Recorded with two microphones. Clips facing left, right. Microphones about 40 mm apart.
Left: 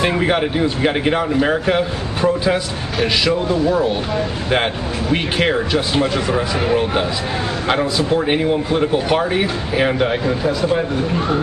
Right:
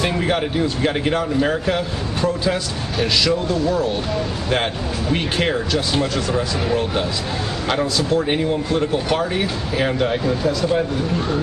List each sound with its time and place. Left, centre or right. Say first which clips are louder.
0.0 s speech: left 3 dB; centre
5.5 s speech: left 3 dB; left